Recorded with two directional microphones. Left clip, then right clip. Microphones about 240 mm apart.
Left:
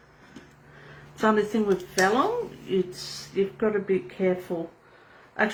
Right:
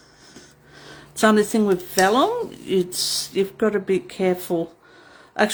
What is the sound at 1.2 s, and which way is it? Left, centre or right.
Speech, right.